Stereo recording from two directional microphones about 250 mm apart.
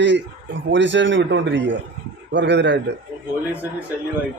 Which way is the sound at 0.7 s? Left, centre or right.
Right.